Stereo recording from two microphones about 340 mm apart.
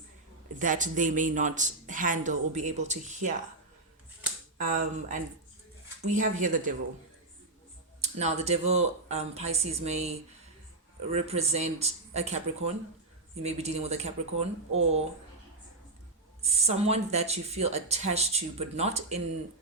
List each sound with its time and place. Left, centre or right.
0.6 s speech: right
4.5 s speech: right
8.0 s speech: centre
11.1 s speech: centre
16.4 s speech: centre